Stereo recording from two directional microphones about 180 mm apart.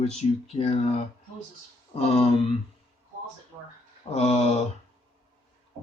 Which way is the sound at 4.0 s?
35° left (ahead or behind).